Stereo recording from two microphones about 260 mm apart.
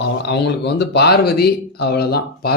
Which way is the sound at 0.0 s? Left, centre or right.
Left.